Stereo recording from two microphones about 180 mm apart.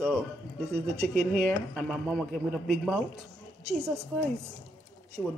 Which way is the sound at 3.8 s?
15° right (ahead or behind).